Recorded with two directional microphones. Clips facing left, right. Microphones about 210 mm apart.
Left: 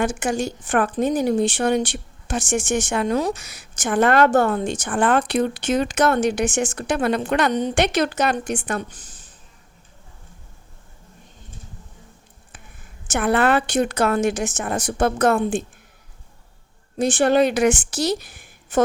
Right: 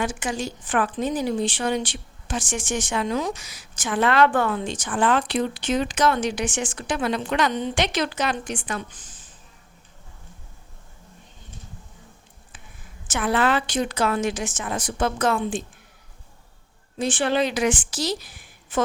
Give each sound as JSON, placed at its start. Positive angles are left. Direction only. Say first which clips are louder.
{"t": 0.0, "sound": "a woman's voice", "louder": "left 5 dB", "side_deg": 50}
{"t": 12.5, "sound": "a woman's voice", "louder": "left 1 dB", "side_deg": 55}
{"t": 17.0, "sound": "a woman's voice", "louder": "left 5 dB", "side_deg": 45}